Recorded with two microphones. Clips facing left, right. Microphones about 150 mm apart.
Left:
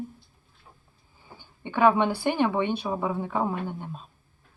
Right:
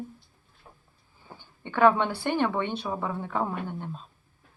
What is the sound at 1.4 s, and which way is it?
A woman's voice, 15° left (ahead or behind).